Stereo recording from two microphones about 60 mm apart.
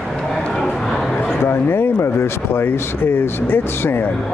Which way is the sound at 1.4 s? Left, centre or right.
Left.